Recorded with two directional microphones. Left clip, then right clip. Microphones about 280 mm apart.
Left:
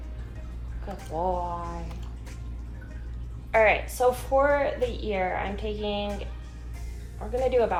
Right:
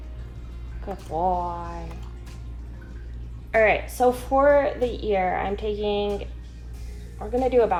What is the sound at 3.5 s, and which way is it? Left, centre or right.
A woman's voice, right.